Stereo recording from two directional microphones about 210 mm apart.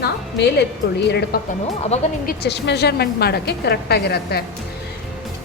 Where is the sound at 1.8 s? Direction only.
30° left (ahead or behind).